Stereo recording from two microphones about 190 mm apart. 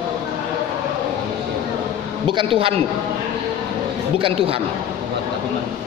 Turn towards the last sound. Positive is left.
turn(degrees=-30)  # may be behind; listen again after turning